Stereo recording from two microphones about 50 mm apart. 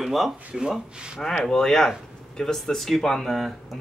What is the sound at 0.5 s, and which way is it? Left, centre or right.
Speech, centre.